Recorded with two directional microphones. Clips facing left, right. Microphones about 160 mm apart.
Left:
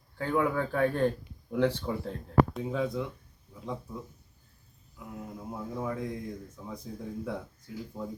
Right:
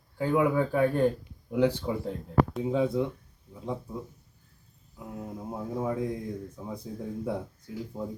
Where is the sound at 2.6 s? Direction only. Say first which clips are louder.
Right 5 dB; 20° right (ahead or behind).